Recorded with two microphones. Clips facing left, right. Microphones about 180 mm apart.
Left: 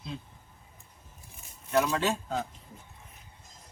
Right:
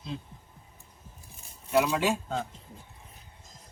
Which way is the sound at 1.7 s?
5° right (ahead or behind).